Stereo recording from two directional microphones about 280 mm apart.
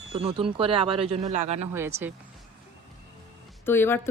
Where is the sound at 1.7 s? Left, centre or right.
Centre.